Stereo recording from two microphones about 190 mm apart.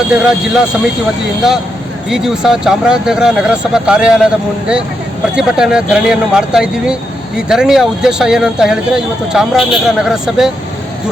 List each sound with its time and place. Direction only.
0.1 s speech: 5° right (ahead or behind)
2.0 s speech: 5° right (ahead or behind)
5.3 s speech: 5° right (ahead or behind)